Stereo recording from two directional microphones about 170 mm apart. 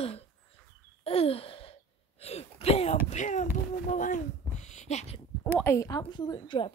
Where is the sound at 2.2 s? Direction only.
35° left (ahead or behind).